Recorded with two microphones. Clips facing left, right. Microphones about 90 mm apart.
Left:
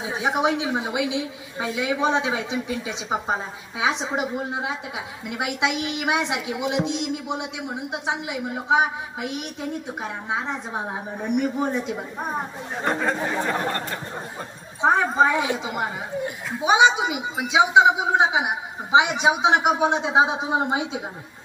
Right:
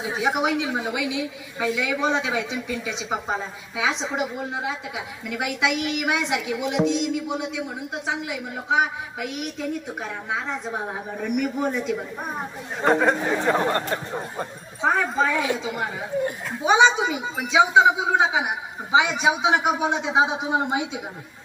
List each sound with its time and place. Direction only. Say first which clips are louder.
0.2 s a woman's voice: left 1 dB; 25° left (ahead or behind)
12.8 s speech: right 5 dB; 25° right (ahead or behind)
14.8 s a woman's voice: left 3 dB; 25° left (ahead or behind)
16.6 s a woman's voice: even; 10° left (ahead or behind)